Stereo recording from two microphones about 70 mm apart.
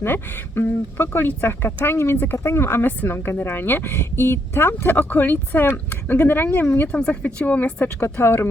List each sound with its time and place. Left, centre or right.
0.0 s speech: left
6.9 s speech: centre